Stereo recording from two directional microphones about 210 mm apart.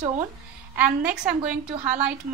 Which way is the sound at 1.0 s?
5° right (ahead or behind).